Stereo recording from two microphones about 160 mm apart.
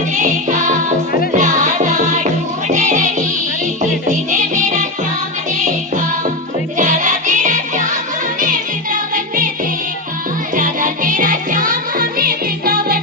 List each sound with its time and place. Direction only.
0.2 s music: 50° right (ahead or behind)
6.7 s music: 50° right (ahead or behind)
10.5 s music: 55° right (ahead or behind)